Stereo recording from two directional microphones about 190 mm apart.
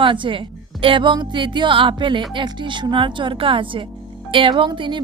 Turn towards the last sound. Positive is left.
turn(degrees=-25)  # may be behind; listen again after turning